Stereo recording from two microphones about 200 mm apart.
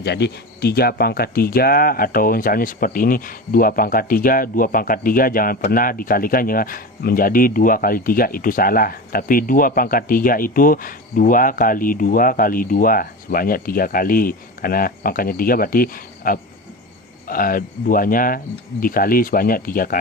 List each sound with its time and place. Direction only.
0.0 s speech: 55° left (ahead or behind)